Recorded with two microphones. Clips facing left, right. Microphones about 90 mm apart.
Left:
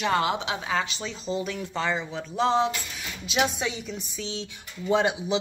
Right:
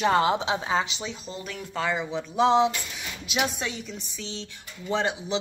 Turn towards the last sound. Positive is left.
turn(degrees=10)  # may be behind; listen again after turning